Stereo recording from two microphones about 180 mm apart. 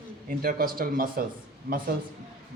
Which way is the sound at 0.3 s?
50° right (ahead or behind).